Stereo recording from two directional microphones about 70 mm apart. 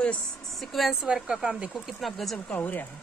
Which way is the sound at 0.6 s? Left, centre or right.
Centre.